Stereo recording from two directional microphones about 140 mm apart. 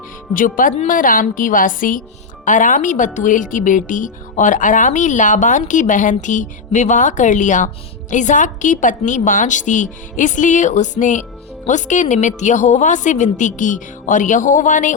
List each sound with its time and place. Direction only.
0.3 s a woman's voice: 75° left (ahead or behind)